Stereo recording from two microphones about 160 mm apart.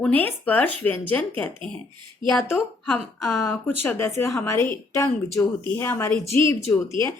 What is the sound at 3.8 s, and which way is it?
A woman's voice, 15° left (ahead or behind).